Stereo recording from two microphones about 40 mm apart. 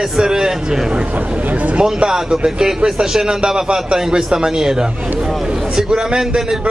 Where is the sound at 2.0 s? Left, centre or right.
Centre.